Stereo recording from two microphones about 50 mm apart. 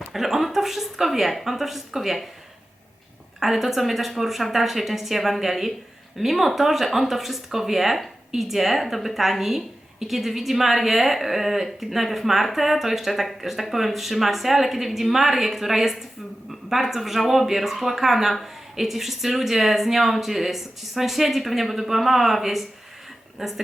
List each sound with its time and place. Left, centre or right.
0.1 s a woman's voice: centre
3.4 s a woman's voice: centre